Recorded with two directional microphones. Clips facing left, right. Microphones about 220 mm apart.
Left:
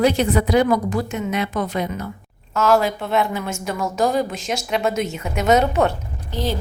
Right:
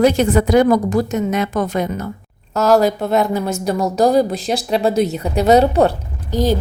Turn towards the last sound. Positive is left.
turn(degrees=-40)  # may be behind; listen again after turning